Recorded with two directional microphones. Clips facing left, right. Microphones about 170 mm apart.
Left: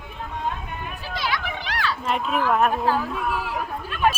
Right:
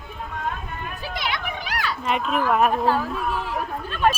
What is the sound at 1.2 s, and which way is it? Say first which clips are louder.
Children playing: left 2 dB; 15° right (ahead or behind).